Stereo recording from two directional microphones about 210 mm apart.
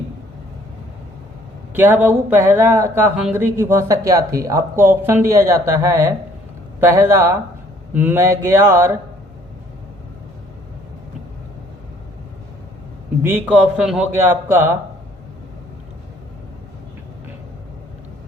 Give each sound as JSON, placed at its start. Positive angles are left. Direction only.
{"t": 1.7, "sound": "speech", "side_deg": -10}
{"t": 13.2, "sound": "speech", "side_deg": -10}